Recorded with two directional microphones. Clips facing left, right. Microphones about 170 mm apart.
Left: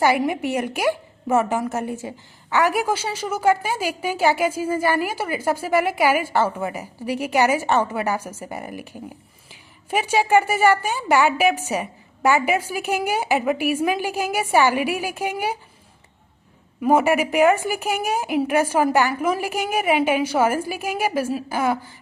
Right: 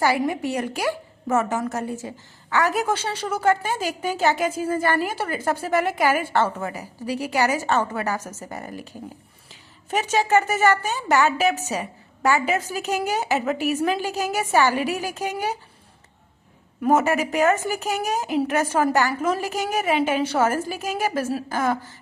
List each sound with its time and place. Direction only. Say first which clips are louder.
0.3 s a woman's voice: left 2 dB; 15° left (ahead or behind)
16.8 s a woman's voice: left 2 dB; 10° left (ahead or behind)